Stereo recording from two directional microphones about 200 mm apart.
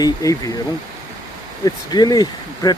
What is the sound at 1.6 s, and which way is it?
Speech, 20° left (ahead or behind).